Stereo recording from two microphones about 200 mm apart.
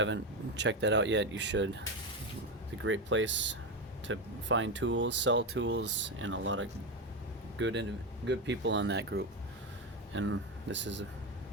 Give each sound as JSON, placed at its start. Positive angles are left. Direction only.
{"t": 0.0, "sound": "speech", "side_deg": -65}
{"t": 2.8, "sound": "speech", "side_deg": -70}
{"t": 10.2, "sound": "speech", "side_deg": -75}